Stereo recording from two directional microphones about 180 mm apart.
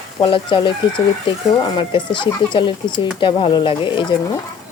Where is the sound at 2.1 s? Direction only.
25° left (ahead or behind).